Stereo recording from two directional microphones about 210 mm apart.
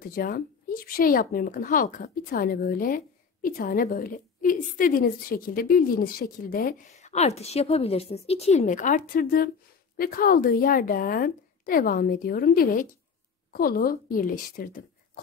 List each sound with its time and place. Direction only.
0.0 s a woman's voice: 45° left (ahead or behind)